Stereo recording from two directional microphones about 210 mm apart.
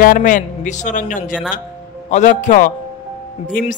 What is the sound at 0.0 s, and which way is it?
Music, 40° left (ahead or behind).